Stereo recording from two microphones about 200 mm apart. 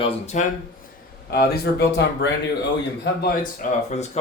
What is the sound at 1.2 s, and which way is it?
Speech, 50° left (ahead or behind).